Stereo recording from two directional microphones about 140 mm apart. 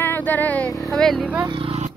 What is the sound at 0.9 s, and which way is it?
Speech, centre (ahead or behind).